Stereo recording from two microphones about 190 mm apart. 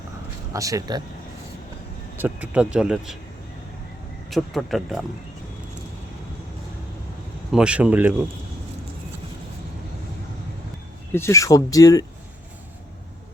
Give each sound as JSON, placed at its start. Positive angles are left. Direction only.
{"t": 0.5, "sound": "speech", "side_deg": -15}
{"t": 2.1, "sound": "speech", "side_deg": -10}
{"t": 4.3, "sound": "speech", "side_deg": 0}
{"t": 7.5, "sound": "speech", "side_deg": -5}
{"t": 11.1, "sound": "speech", "side_deg": 15}